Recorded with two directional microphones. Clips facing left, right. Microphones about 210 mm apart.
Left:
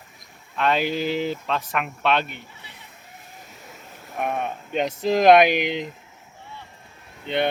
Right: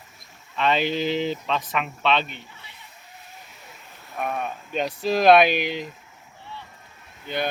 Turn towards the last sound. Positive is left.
turn(degrees=25)  # may be behind; listen again after turning